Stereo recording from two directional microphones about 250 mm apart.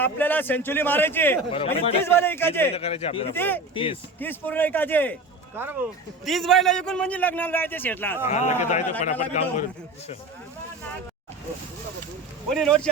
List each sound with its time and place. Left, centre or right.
0.0 s a man's voice: centre
1.5 s a man's voice: left
2.0 s a man's voice: centre
2.7 s a man's voice: left
3.3 s a man's voice: centre
5.6 s a man's voice: centre
8.3 s a man's voice: left
12.5 s speech: centre